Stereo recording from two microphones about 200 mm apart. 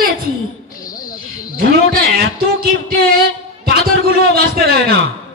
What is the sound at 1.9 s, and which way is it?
Speech, 50° right (ahead or behind).